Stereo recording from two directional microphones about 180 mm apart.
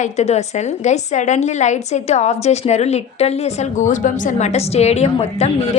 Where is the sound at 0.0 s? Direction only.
40° left (ahead or behind).